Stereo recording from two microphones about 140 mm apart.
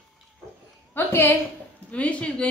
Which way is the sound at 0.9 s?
15° left (ahead or behind).